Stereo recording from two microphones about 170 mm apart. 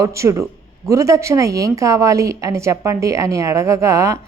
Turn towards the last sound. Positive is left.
turn(degrees=-20)  # may be behind; listen again after turning